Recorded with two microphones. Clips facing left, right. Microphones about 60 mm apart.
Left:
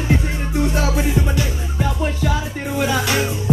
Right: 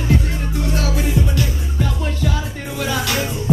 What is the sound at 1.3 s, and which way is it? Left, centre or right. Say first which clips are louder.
Music: even; centre.